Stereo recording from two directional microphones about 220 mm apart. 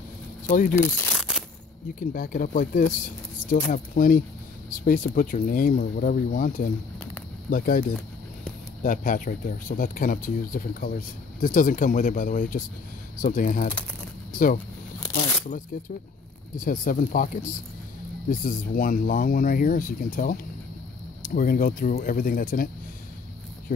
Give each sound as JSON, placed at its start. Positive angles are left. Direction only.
{"t": 0.5, "sound": "speech", "side_deg": 35}
{"t": 0.7, "sound": "speech", "side_deg": 10}
{"t": 2.0, "sound": "speech", "side_deg": 40}
{"t": 15.7, "sound": "speech", "side_deg": 40}